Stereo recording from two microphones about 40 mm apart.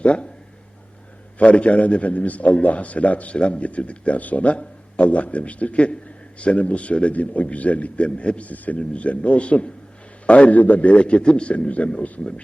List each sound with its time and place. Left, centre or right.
0.0 s speech: left
1.4 s a man's voice: left
8.8 s a man's voice: left